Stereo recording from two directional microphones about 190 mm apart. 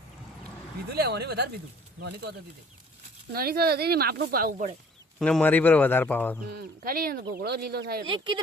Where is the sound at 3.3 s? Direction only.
55° right (ahead or behind).